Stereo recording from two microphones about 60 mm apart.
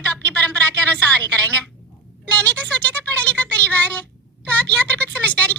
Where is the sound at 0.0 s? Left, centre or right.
Left.